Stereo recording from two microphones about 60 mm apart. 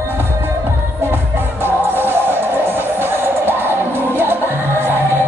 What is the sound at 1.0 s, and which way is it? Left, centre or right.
Music, right.